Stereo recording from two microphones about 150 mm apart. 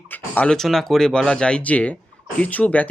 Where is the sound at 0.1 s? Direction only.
10° left (ahead or behind).